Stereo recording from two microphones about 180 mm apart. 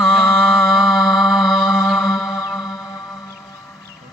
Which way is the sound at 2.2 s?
20° left (ahead or behind).